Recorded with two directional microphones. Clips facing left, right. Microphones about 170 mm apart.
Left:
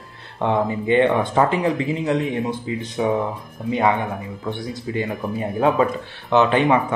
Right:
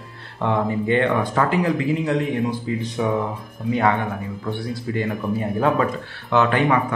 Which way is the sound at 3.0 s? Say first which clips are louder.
Left 3 dB; 20° left (ahead or behind).